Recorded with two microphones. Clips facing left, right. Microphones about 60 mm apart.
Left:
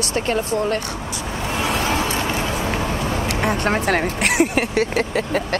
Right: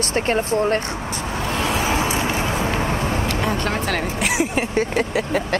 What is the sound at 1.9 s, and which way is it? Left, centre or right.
Vehicle, centre.